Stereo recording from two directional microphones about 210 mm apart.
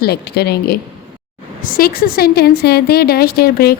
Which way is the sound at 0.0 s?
50° left (ahead or behind).